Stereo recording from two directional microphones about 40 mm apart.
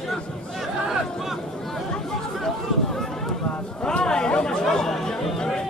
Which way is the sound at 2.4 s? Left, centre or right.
Centre.